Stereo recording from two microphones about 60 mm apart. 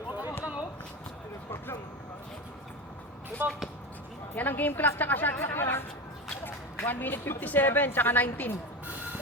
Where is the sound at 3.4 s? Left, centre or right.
Right.